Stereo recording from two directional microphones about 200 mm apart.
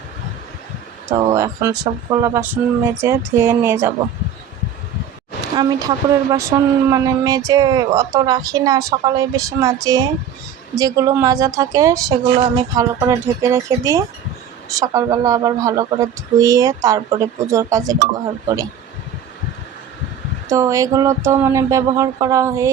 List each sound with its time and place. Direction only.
1.3 s speech: 15° right (ahead or behind)
5.5 s speech: 20° right (ahead or behind)
20.5 s speech: 15° right (ahead or behind)